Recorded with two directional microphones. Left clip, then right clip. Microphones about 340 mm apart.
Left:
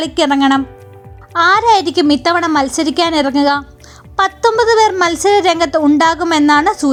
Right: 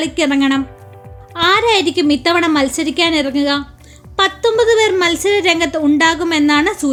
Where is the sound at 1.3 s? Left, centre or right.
Centre.